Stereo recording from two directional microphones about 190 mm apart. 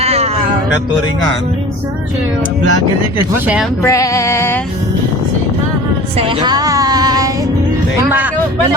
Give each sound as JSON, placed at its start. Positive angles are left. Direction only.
{"t": 0.0, "sound": "music", "side_deg": -35}
{"t": 3.3, "sound": "speech", "side_deg": -10}
{"t": 3.8, "sound": "female singing", "side_deg": 15}
{"t": 6.1, "sound": "female singing", "side_deg": -25}